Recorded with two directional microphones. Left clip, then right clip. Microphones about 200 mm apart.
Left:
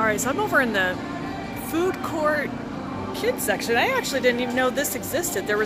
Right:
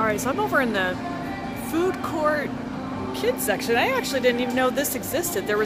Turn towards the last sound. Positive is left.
turn(degrees=-10)  # may be behind; listen again after turning